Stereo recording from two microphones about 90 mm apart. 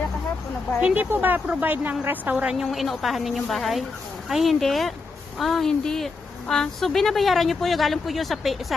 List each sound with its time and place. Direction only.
0.7 s speech: 10° right (ahead or behind)